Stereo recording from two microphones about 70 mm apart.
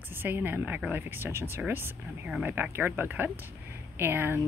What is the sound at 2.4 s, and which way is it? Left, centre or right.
A woman's voice, right.